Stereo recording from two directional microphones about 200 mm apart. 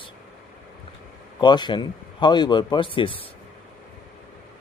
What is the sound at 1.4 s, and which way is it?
Speech, 20° left (ahead or behind).